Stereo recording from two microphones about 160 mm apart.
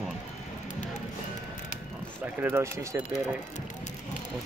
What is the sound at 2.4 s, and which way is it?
Speech, 15° right (ahead or behind).